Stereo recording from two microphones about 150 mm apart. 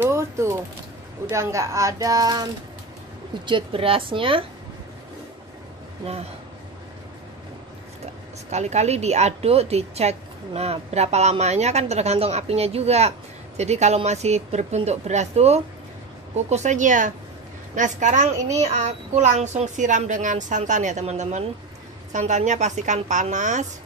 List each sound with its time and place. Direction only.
0.0 s a woman's voice: 15° right (ahead or behind); by 4.5 s 35° right (ahead or behind)
8.0 s a woman's voice: 50° right (ahead or behind)